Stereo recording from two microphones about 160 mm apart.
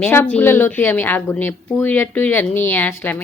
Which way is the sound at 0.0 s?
10° left (ahead or behind).